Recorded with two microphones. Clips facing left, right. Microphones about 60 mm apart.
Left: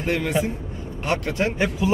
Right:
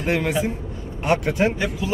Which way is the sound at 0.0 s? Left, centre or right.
Right.